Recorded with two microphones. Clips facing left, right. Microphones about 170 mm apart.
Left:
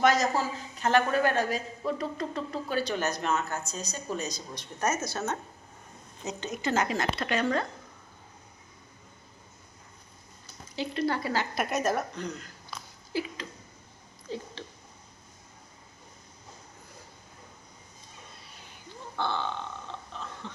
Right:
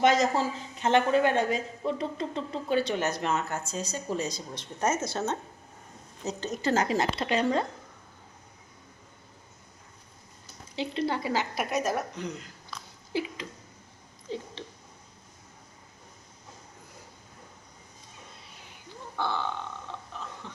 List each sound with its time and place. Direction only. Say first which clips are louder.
0.0 s a woman's voice: right 1 dB; 25° right (ahead or behind)
10.8 s a woman's voice: even; 20° right (ahead or behind)
19.1 s grunt: even; 10° right (ahead or behind)
20.4 s chuckle: left 2 dB; 10° right (ahead or behind)